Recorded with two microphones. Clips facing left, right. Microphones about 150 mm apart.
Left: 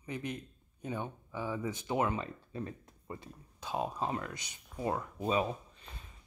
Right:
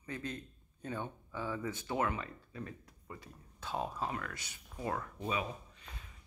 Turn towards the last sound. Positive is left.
turn(degrees=30)  # may be behind; listen again after turning